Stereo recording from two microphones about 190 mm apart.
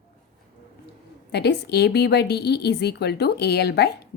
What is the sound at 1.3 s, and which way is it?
A woman's voice, 60° left (ahead or behind).